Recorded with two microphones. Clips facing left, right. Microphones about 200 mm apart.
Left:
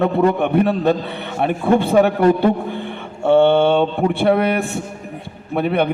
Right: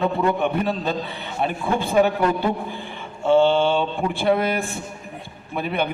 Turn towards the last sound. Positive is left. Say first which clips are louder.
# left 7 dB
turn(degrees=60)  # may be behind; listen again after turning